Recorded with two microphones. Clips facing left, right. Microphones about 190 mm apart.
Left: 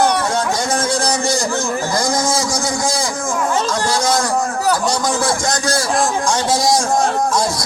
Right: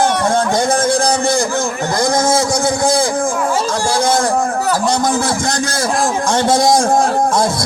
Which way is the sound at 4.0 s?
55° right (ahead or behind).